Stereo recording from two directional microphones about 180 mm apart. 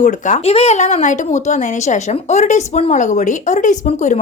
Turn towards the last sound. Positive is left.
turn(degrees=40)  # may be behind; listen again after turning